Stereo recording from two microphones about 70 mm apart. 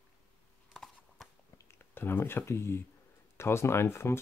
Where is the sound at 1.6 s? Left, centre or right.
Left.